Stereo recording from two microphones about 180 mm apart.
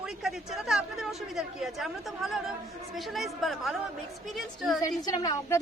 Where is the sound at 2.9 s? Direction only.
Centre (ahead or behind).